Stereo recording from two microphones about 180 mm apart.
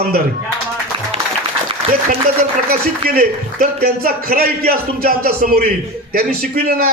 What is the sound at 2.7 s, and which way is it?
A man's voice, 55° right (ahead or behind).